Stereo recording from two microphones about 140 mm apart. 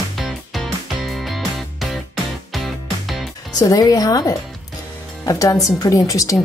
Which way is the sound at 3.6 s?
25° left (ahead or behind).